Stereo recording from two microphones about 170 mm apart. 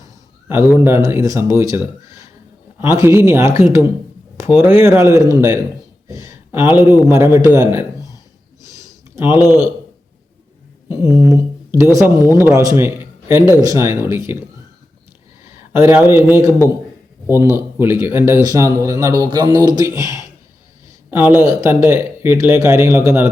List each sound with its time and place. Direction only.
0.7 s speech: 15° right (ahead or behind)
8.6 s a sound: 20° right (ahead or behind)
10.8 s speech: 20° right (ahead or behind)
15.4 s speech: 15° right (ahead or behind)